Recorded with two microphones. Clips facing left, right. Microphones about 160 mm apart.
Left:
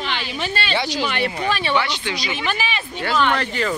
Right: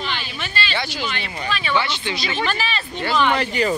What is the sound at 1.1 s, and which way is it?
Speech, 55° left (ahead or behind).